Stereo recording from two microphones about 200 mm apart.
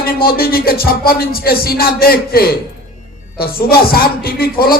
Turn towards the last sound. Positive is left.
turn(degrees=50)  # may be behind; listen again after turning